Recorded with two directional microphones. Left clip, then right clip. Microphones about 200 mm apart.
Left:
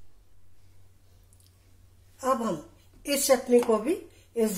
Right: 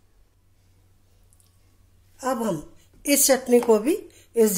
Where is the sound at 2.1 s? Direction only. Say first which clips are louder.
Right 1 dB; 30° right (ahead or behind).